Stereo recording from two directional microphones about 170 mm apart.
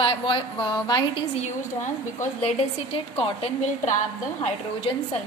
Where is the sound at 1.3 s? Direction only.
45° left (ahead or behind).